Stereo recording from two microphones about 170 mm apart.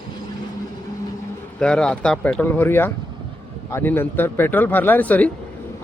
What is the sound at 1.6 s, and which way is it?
Speech, 5° left (ahead or behind).